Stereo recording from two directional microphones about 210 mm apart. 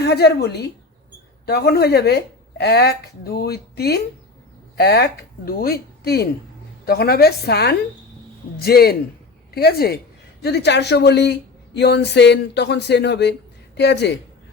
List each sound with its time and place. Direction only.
0.0 s speech: 50° left (ahead or behind)